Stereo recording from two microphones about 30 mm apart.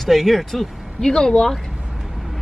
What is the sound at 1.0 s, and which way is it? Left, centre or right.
Speech, left.